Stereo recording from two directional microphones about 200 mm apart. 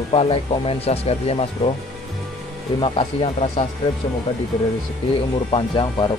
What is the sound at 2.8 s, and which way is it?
Speech, 25° left (ahead or behind).